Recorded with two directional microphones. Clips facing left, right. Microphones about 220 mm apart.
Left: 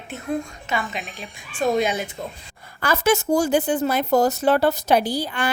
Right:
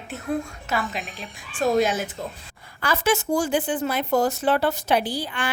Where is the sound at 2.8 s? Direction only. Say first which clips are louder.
Left 3 dB; 45° left (ahead or behind).